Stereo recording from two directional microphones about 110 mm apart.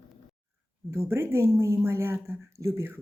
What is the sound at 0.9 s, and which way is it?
Speech, 25° right (ahead or behind).